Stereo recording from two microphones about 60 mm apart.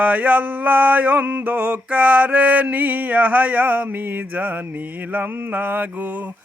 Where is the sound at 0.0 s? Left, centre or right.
Right.